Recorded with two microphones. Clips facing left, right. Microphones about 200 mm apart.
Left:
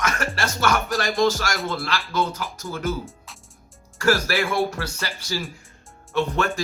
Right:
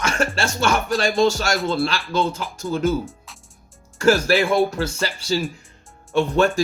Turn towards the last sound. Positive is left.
turn(degrees=-30)  # may be behind; listen again after turning